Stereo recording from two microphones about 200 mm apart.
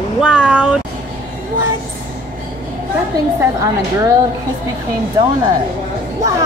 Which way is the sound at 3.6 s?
15° right (ahead or behind).